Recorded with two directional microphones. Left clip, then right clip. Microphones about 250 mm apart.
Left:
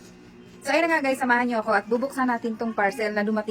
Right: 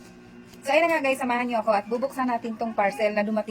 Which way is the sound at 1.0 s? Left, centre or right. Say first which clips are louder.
Left 2 dB; centre.